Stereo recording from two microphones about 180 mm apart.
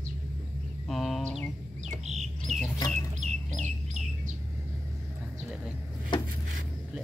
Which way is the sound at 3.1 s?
40° right (ahead or behind).